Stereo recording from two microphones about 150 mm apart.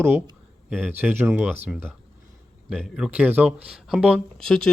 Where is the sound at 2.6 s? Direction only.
Centre (ahead or behind).